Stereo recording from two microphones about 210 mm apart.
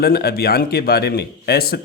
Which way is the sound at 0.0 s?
50° left (ahead or behind).